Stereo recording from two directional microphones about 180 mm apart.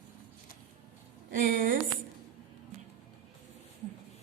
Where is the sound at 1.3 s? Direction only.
50° right (ahead or behind).